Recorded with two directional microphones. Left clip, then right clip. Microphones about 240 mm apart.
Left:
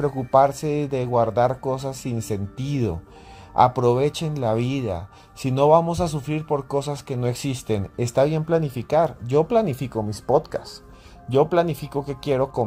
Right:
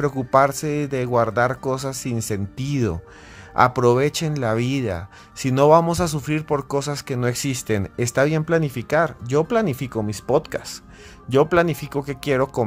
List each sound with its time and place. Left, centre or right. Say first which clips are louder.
0.0 s speech: even; centre